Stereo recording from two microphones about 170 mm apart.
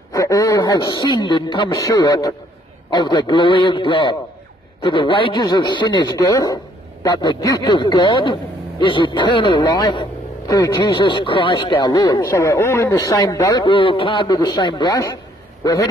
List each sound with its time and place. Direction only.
0.1 s a man's voice: 20° left (ahead or behind)